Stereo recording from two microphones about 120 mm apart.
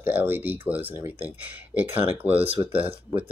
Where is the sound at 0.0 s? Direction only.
15° right (ahead or behind).